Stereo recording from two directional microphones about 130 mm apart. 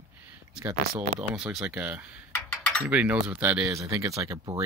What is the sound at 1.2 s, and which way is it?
Speech, 10° right (ahead or behind).